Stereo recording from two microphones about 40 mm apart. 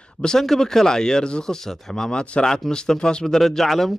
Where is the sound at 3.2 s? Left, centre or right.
Centre.